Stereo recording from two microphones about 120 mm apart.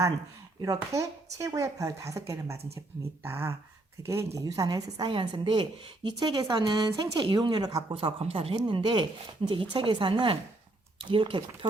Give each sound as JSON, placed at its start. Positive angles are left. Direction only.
{"t": 0.6, "sound": "a woman's voice", "side_deg": -30}
{"t": 7.9, "sound": "speech", "side_deg": -50}
{"t": 8.5, "sound": "speech", "side_deg": -40}